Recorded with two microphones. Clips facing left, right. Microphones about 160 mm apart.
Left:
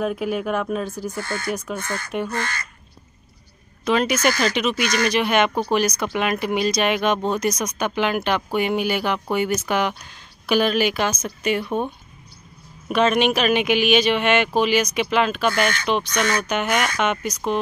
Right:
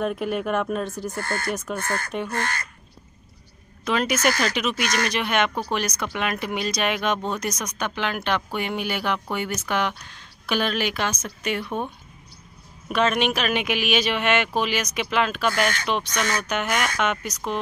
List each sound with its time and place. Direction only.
0.0 s speech: centre (ahead or behind)
1.1 s speech: 50° right (ahead or behind)
3.8 s speech: centre (ahead or behind)